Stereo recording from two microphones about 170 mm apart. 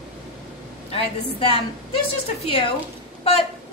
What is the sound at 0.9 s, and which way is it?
Speech, 35° left (ahead or behind).